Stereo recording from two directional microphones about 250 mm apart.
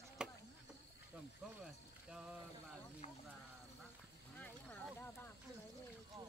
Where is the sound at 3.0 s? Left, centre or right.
Left.